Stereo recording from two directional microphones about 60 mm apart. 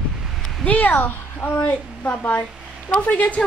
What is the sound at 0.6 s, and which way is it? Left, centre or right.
A woman's voice, left.